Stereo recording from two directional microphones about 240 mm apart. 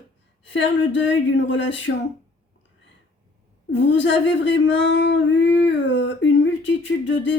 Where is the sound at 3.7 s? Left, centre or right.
Left.